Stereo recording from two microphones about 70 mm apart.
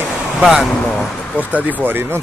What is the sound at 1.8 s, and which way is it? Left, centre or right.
Speech, right.